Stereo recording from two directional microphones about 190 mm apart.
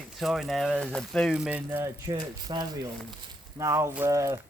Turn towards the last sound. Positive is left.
turn(degrees=-15)  # may be behind; listen again after turning